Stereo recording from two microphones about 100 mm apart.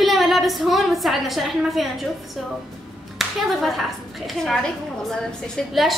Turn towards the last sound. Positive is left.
turn(degrees=5)  # may be behind; listen again after turning